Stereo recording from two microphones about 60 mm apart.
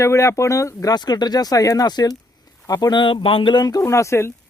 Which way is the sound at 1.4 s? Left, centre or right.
Left.